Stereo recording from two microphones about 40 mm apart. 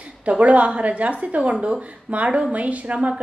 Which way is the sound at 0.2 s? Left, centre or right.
Right.